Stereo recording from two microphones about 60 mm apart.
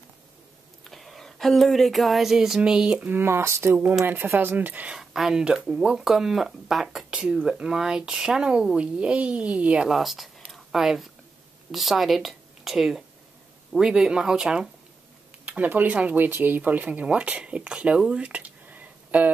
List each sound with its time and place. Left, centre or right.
0.8 s speech: centre
3.0 s speech: right
4.0 s speech: right
4.9 s speech: centre
7.2 s speech: centre
9.8 s speech: centre
10.5 s a sound: centre
11.7 s a woman's voice: centre
15.4 s speech: right